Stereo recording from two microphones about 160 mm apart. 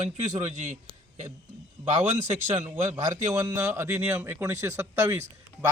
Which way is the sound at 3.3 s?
20° right (ahead or behind).